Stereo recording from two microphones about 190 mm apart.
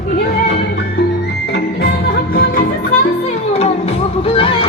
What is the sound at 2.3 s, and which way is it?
Music, 50° left (ahead or behind).